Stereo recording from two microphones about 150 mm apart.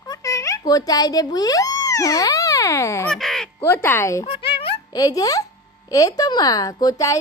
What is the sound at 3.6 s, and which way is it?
Speech, 15° left (ahead or behind).